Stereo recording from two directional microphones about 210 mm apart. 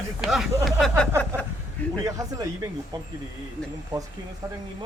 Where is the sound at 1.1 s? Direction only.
10° right (ahead or behind).